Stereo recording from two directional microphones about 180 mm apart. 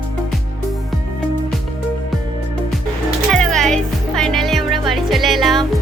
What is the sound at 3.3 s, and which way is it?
Music, 5° left (ahead or behind).